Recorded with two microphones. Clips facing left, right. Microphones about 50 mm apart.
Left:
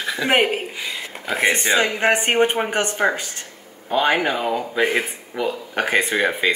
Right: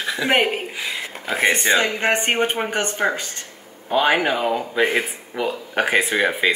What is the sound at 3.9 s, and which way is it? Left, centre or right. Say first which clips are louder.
Speech: right 1 dB; centre.